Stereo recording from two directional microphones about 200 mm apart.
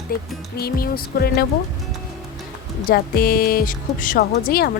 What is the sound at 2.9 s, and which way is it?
Speech, 50° left (ahead or behind).